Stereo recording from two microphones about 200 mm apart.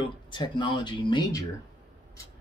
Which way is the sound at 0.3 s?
25° left (ahead or behind).